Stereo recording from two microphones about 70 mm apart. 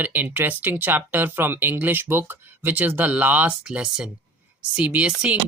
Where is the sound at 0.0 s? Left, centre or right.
Right.